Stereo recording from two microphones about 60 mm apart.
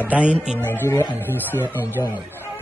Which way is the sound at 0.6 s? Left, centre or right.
Left.